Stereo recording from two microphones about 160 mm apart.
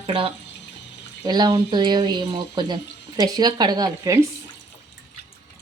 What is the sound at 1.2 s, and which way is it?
Speech, 25° right (ahead or behind).